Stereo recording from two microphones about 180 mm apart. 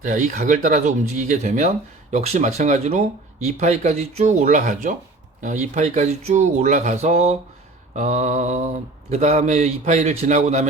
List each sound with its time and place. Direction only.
0.0 s speech: 45° right (ahead or behind)